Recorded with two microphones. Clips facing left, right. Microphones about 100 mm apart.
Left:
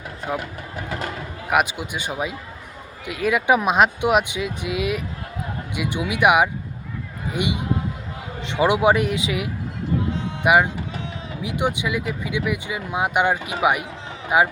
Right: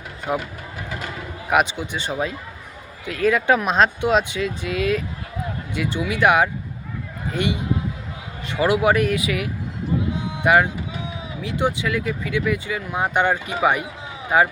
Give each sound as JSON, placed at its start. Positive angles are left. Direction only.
{"t": 0.3, "sound": "speech", "side_deg": -10}
{"t": 1.5, "sound": "speech", "side_deg": 5}